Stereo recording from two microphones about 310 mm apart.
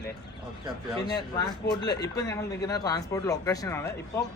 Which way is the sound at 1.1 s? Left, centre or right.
Centre.